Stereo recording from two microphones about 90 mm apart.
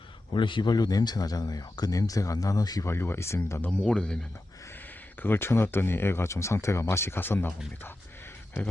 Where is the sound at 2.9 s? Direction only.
25° left (ahead or behind).